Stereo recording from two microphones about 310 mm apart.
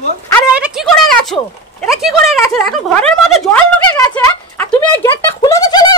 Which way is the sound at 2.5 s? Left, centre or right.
Centre.